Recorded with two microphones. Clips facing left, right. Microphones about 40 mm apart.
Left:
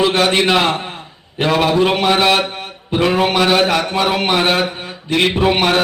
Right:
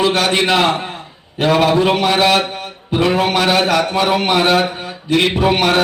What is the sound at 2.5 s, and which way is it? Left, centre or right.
Mantra, left.